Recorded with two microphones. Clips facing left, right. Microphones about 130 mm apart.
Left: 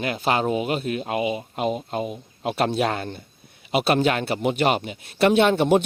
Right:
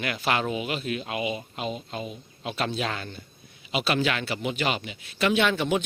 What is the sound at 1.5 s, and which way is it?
Speech, 50° left (ahead or behind).